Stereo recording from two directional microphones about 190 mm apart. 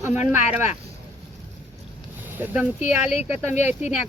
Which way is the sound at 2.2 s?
10° right (ahead or behind).